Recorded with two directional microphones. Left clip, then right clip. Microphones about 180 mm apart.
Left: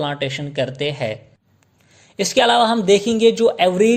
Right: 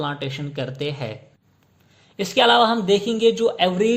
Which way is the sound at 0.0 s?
30° left (ahead or behind).